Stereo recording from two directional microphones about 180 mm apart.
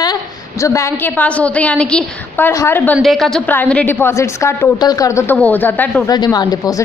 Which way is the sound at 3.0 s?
Centre (ahead or behind).